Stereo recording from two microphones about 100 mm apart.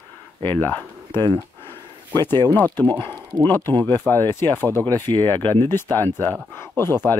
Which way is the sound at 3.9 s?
20° left (ahead or behind).